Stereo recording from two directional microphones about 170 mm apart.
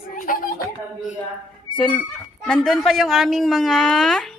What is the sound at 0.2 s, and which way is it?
Chuckle, 55° left (ahead or behind).